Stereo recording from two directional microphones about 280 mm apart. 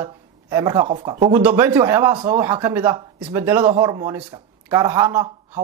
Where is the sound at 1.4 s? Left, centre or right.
Centre.